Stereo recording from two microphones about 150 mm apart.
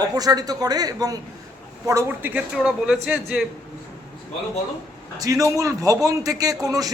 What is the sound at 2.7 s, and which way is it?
Speech, 5° right (ahead or behind).